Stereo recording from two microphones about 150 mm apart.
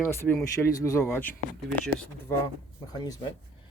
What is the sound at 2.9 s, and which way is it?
Speech, 25° left (ahead or behind).